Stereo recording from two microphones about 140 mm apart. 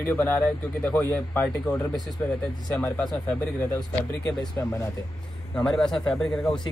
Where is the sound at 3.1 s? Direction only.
15° left (ahead or behind).